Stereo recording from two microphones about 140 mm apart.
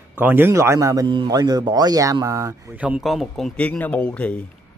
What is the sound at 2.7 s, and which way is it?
Speech, 10° right (ahead or behind).